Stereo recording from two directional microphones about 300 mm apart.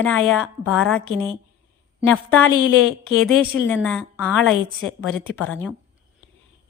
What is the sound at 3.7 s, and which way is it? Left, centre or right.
A woman's voice, centre.